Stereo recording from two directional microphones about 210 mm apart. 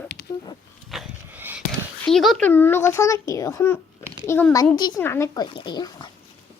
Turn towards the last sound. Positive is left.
turn(degrees=20)  # may be behind; listen again after turning